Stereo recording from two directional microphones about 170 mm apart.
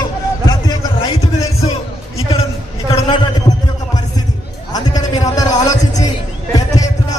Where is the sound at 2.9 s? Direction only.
25° left (ahead or behind).